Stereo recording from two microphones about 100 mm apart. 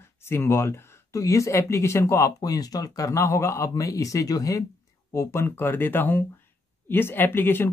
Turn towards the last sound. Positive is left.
turn(degrees=20)  # may be behind; listen again after turning